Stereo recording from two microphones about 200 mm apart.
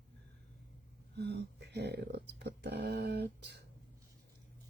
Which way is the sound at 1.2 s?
55° right (ahead or behind).